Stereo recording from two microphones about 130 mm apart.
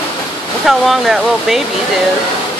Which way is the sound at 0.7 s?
Centre (ahead or behind).